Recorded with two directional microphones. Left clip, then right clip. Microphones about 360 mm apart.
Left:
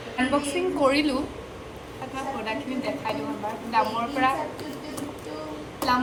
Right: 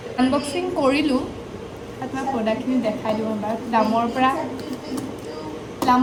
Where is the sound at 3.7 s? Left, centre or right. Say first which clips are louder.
Right 4 dB; centre.